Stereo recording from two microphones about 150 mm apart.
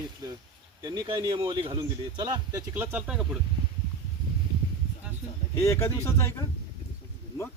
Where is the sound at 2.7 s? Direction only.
10° right (ahead or behind).